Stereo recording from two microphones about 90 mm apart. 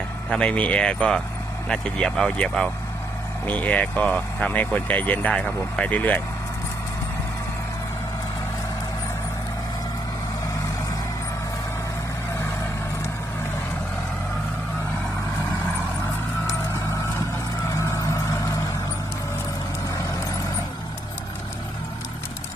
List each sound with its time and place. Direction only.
0.3 s speech: 10° left (ahead or behind)
17.7 s music: 35° left (ahead or behind)